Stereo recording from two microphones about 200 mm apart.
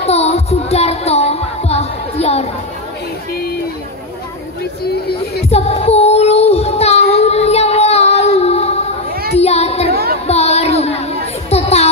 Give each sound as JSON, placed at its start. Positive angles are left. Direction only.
{"t": 0.0, "sound": "music", "side_deg": 30}
{"t": 4.8, "sound": "a sound", "side_deg": 50}
{"t": 5.5, "sound": "child singing", "side_deg": 30}
{"t": 9.4, "sound": "music", "side_deg": 30}
{"t": 10.2, "sound": "a sound", "side_deg": 30}
{"t": 11.5, "sound": "music", "side_deg": 30}